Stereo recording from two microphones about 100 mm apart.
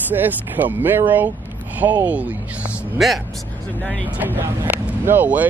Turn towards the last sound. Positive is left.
turn(degrees=-15)  # may be behind; listen again after turning